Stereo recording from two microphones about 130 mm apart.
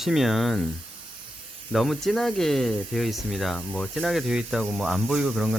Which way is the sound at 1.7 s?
Centre (ahead or behind).